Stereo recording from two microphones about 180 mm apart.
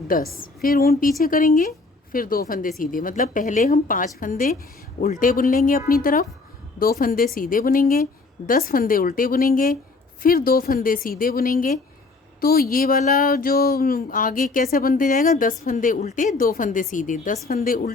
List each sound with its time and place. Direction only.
0.3 s speech: 55° left (ahead or behind)